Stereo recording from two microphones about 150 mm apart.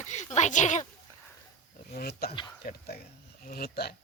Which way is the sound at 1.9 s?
90° left.